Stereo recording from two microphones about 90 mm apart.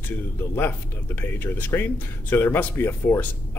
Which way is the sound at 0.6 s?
20° left (ahead or behind).